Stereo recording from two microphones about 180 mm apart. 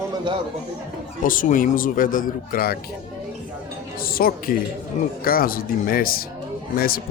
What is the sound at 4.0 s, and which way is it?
A woman's voice, 55° left (ahead or behind).